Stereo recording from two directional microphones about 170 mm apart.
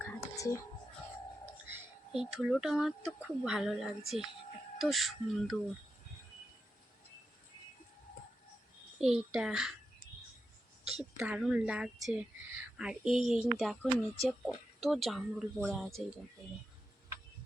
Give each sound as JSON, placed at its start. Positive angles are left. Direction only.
{"t": 0.0, "sound": "whispering", "side_deg": 15}
{"t": 1.6, "sound": "speech", "side_deg": -5}
{"t": 9.0, "sound": "speech", "side_deg": -5}
{"t": 11.2, "sound": "speech", "side_deg": -5}